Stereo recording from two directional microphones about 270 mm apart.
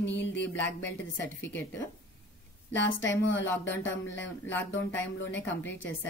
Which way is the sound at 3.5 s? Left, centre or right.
Centre.